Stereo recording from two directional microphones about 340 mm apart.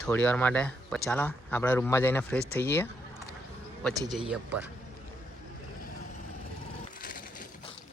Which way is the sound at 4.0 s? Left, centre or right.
Centre.